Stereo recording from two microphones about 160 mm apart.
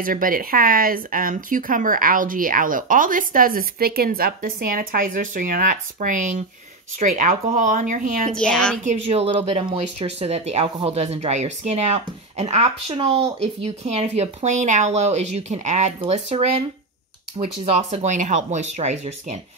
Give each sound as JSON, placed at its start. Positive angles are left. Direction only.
{"t": 0.0, "sound": "speech", "side_deg": -60}
{"t": 8.3, "sound": "a woman's voice", "side_deg": 5}
{"t": 8.8, "sound": "speech", "side_deg": -40}
{"t": 17.8, "sound": "speech", "side_deg": -50}